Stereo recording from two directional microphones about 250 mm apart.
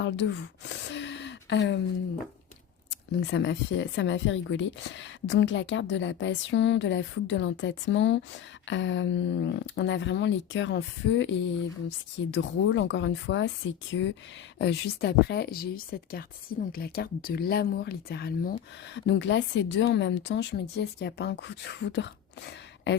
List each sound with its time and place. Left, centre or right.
0.0 s speech: left
3.2 s speech: left